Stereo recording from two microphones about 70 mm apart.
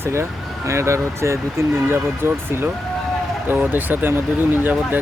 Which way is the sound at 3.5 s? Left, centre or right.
Right.